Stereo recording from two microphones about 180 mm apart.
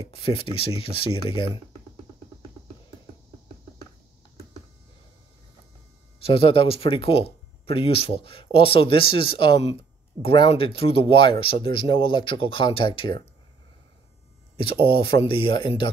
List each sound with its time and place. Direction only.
0.0 s speech: 30° left (ahead or behind)
6.2 s speech: 30° left (ahead or behind)
14.7 s speech: 30° left (ahead or behind)